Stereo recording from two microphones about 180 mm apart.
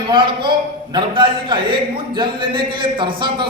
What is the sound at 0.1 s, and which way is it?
A man's voice, 25° right (ahead or behind).